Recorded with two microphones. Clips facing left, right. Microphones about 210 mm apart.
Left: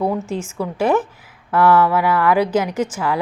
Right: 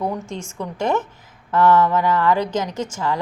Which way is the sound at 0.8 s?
10° left (ahead or behind).